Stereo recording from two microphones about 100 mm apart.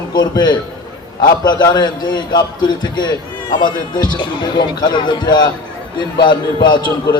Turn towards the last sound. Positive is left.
turn(degrees=50)  # may be behind; listen again after turning